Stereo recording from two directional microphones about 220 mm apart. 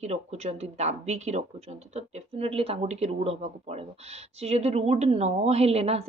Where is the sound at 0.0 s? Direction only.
30° right (ahead or behind).